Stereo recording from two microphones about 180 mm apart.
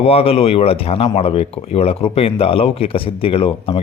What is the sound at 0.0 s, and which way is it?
A man's voice, 35° left (ahead or behind).